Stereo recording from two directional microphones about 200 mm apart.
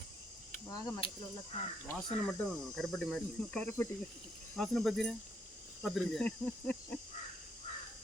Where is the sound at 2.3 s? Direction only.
Centre (ahead or behind).